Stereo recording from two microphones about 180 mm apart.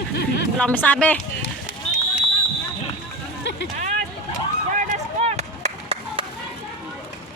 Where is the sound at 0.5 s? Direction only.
10° left (ahead or behind).